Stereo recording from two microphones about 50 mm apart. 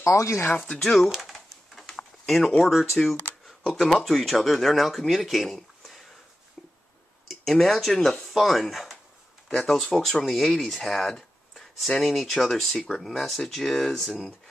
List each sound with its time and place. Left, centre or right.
0.0 s speech: left
0.7 s speech: centre
1.2 s a sound: centre
2.2 s speech: centre
3.0 s a sound: centre
3.8 s speech: centre
7.2 s speech: centre